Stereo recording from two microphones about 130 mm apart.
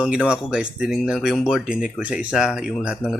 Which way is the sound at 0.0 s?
10° right (ahead or behind).